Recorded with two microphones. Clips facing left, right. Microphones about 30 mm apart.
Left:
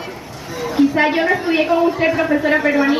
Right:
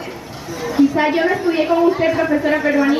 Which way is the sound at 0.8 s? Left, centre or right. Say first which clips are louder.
Even; centre.